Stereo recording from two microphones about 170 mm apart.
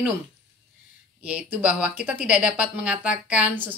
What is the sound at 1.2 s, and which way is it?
Speech, 10° right (ahead or behind).